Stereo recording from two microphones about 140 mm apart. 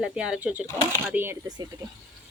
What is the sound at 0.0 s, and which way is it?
Speech, 5° right (ahead or behind).